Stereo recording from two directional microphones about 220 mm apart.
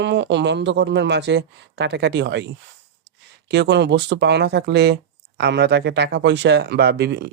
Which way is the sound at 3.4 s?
50° right (ahead or behind).